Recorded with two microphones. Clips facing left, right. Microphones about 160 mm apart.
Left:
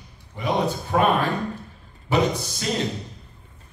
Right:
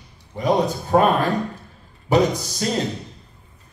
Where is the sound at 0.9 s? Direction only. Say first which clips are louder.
Right 4 dB; 40° right (ahead or behind).